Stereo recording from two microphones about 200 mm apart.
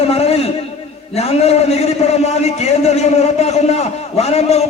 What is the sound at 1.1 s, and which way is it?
A man's voice, 30° left (ahead or behind).